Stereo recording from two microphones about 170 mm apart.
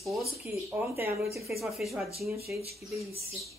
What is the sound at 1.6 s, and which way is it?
Speech, centre (ahead or behind).